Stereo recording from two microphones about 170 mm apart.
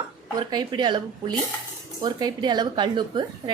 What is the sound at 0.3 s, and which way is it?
A woman's voice, 25° right (ahead or behind).